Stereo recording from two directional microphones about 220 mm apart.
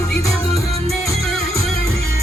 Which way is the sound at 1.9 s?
45° left (ahead or behind).